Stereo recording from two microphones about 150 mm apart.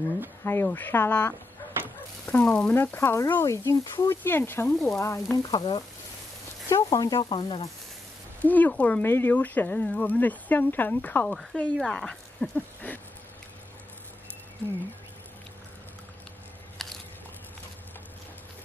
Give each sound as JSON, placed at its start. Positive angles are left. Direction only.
{"t": 0.4, "sound": "speech", "side_deg": 15}
{"t": 8.4, "sound": "speech", "side_deg": 10}
{"t": 16.8, "sound": "a sound", "side_deg": 0}